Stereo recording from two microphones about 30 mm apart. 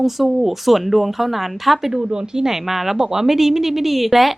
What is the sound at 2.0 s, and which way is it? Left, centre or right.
Speech, right.